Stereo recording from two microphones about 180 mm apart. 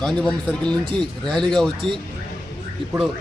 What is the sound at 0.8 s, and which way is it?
Speech, 25° right (ahead or behind).